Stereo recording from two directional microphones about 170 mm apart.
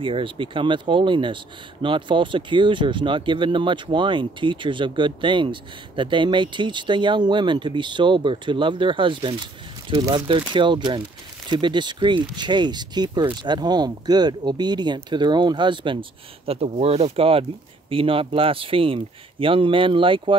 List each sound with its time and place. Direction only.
0.0 s speech: 30° right (ahead or behind)